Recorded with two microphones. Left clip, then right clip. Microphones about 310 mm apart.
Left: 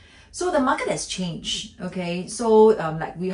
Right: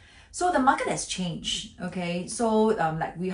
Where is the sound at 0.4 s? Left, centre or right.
Centre.